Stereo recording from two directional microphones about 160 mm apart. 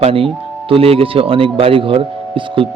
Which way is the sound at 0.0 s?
35° right (ahead or behind).